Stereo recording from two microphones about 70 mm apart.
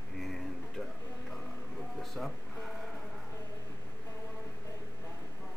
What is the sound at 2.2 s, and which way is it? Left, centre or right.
Speech, centre.